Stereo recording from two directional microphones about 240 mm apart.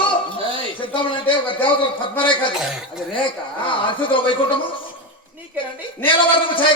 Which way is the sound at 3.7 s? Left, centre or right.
Left.